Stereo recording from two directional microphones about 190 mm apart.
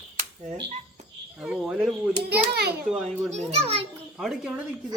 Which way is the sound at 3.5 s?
30° right (ahead or behind).